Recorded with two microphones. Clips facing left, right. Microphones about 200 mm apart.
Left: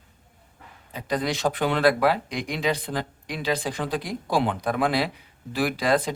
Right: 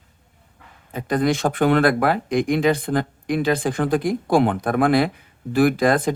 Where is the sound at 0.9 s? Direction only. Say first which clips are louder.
Right 7 dB; 50° right (ahead or behind).